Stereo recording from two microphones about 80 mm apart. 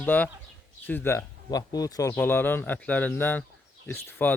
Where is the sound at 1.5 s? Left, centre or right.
Left.